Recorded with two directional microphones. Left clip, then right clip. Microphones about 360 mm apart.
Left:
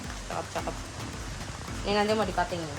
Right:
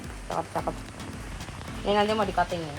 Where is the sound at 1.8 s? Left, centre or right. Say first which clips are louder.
Right 2 dB; centre.